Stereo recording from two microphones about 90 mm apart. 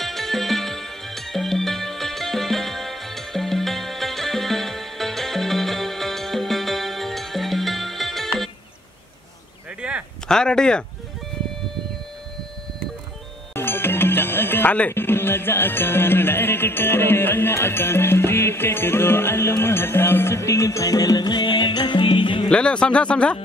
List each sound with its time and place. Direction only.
0.0 s music: centre (ahead or behind)
9.8 s a sound: 10° right (ahead or behind)
10.2 s speech: 10° left (ahead or behind)
13.6 s speech: 25° left (ahead or behind); by 22.5 s 65° left (ahead or behind)
22.5 s speech: 10° left (ahead or behind)